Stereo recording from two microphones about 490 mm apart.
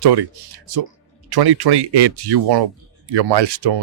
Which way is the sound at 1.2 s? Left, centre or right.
Right.